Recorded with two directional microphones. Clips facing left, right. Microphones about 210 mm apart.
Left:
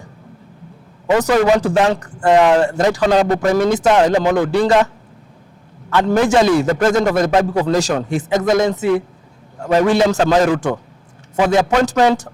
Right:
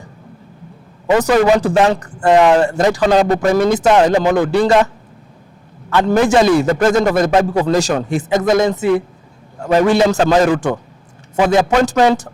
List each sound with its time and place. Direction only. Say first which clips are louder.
1.0 s a man's voice: right 1 dB; 20° right (ahead or behind)
5.9 s a man's voice: right 1 dB; 15° right (ahead or behind)